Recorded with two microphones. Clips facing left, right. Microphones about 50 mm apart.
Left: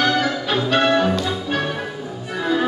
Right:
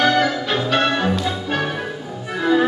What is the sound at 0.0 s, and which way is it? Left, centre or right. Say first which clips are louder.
Music: right 2 dB; centre.